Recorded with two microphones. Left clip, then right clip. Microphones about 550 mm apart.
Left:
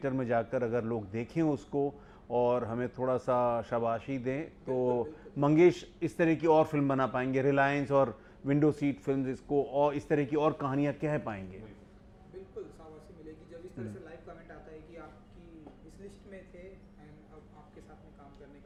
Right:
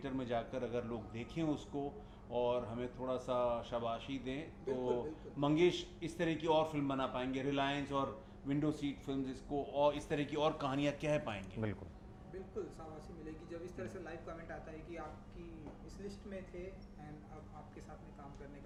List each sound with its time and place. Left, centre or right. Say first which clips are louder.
0.0 s speech: left 9 dB; left